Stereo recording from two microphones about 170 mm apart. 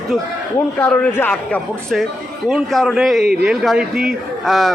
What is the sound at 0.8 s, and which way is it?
A man's voice, 10° left (ahead or behind).